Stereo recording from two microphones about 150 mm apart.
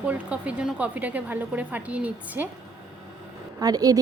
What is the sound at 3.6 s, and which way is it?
Speech, 25° right (ahead or behind).